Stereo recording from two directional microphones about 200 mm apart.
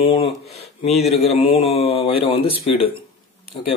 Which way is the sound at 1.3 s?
30° left (ahead or behind).